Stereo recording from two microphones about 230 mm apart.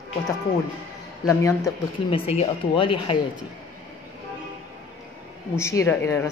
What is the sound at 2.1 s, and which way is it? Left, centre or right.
Speech, left.